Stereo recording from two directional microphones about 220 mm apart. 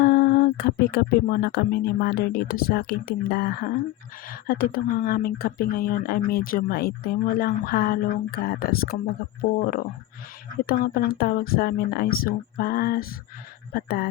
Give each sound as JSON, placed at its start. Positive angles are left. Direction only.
{"t": 0.0, "sound": "speech", "side_deg": 45}